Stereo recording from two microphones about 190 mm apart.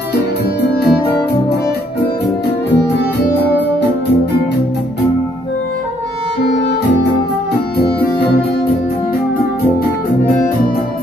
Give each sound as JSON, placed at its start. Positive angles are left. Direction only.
{"t": 0.6, "sound": "music", "side_deg": 55}